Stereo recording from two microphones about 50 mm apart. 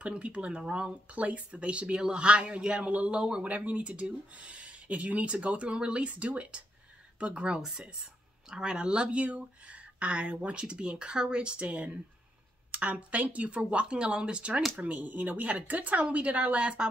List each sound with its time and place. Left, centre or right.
0.0 s speech: right
3.4 s speech: right